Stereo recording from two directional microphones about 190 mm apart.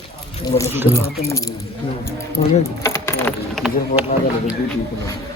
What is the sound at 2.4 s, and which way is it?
Speech, 40° left (ahead or behind).